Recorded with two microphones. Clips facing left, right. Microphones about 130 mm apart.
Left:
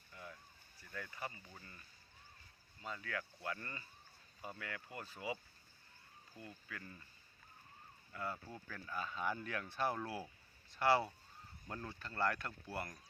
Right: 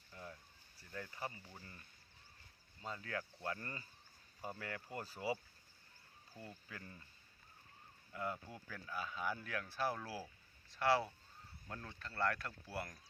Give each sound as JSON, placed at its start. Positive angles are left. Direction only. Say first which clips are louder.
{"t": 0.8, "sound": "speech", "louder": "right 1 dB", "side_deg": -30}
{"t": 2.8, "sound": "speech", "louder": "even", "side_deg": -30}
{"t": 8.1, "sound": "speech", "louder": "right 1 dB", "side_deg": -15}